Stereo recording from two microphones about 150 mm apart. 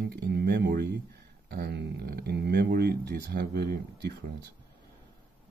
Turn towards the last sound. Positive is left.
turn(degrees=-90)